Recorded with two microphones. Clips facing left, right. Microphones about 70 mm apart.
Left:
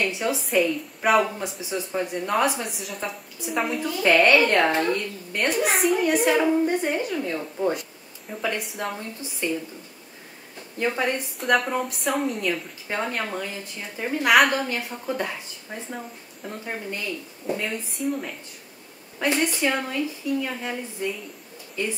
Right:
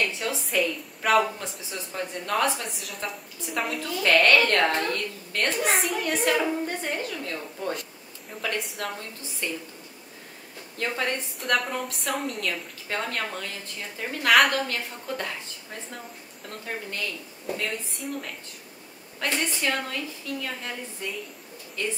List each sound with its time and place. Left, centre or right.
0.0 s a woman's voice: centre
1.0 s a woman's voice: centre
2.8 s a woman's voice: centre
4.0 s a woman's voice: centre
5.6 s a woman's voice: centre
8.3 s a woman's voice: centre
9.4 s a woman's voice: centre
10.8 s a woman's voice: centre
11.3 s a woman's voice: centre
17.5 s a woman's voice: centre
19.1 s a woman's voice: centre